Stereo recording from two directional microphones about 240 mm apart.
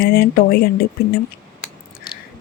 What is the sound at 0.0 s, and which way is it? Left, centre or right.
Speech, left.